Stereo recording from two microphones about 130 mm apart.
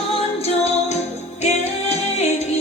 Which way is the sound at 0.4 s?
55° left (ahead or behind).